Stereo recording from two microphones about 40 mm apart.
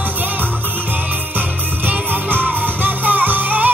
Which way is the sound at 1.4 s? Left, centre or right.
Right.